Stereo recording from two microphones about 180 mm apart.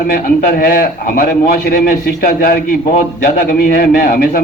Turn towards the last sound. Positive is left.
turn(degrees=50)  # may be behind; listen again after turning